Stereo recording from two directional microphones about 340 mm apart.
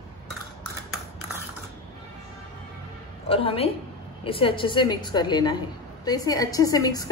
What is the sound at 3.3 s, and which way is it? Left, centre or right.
A woman's voice, centre.